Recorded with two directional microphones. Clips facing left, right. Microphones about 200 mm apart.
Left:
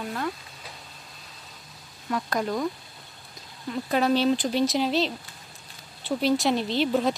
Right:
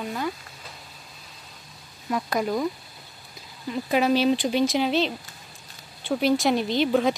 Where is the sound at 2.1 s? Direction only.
10° right (ahead or behind).